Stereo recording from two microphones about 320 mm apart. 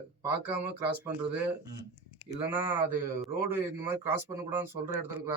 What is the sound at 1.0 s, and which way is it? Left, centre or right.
A man's voice, centre.